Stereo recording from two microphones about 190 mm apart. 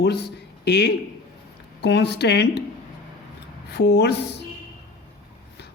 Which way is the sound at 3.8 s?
65° left (ahead or behind).